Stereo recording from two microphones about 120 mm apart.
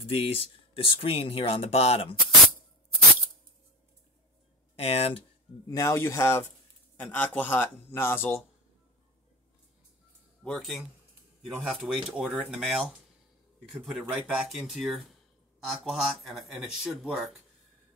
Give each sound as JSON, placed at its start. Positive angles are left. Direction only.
{"t": 0.0, "sound": "speech", "side_deg": 50}
{"t": 4.7, "sound": "speech", "side_deg": 55}
{"t": 5.7, "sound": "a man's voice", "side_deg": 25}
{"t": 10.4, "sound": "speech", "side_deg": 0}